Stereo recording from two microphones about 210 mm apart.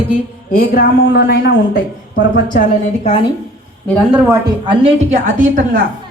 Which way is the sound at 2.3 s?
40° left (ahead or behind).